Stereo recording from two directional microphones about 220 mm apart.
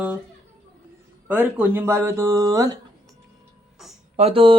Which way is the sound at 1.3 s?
10° right (ahead or behind).